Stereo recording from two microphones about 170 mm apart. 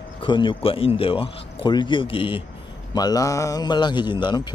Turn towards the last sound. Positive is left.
turn(degrees=25)  # may be behind; listen again after turning